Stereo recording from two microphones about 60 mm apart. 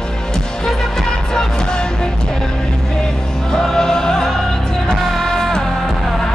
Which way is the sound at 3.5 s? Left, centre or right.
Centre.